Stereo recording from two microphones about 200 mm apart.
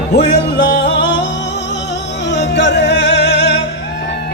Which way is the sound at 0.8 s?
60° left (ahead or behind).